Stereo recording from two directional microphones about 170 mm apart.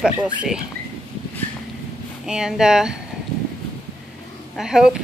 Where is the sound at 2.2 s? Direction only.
5° right (ahead or behind).